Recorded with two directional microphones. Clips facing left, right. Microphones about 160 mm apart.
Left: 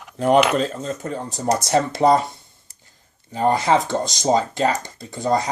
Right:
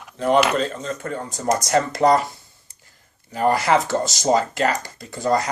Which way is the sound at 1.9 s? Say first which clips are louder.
Left 1 dB; 25° left (ahead or behind).